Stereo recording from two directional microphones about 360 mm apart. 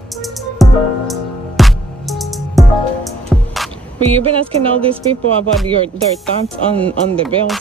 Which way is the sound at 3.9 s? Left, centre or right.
Centre.